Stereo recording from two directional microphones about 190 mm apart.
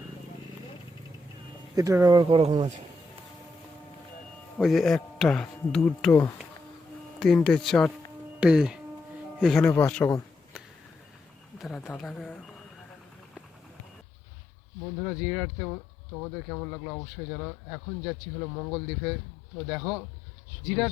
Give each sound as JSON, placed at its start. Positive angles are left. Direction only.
{"t": 1.7, "sound": "speech", "side_deg": -15}
{"t": 4.5, "sound": "speech", "side_deg": 0}
{"t": 11.6, "sound": "speech", "side_deg": 0}
{"t": 14.9, "sound": "speech", "side_deg": 0}